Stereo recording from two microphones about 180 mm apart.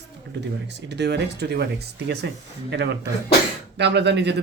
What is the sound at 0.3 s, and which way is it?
Speech, 70° right (ahead or behind).